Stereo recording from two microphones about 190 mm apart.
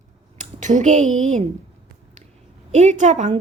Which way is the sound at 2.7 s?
40° right (ahead or behind).